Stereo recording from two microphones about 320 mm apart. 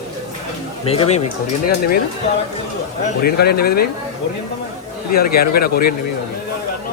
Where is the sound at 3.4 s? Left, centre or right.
Left.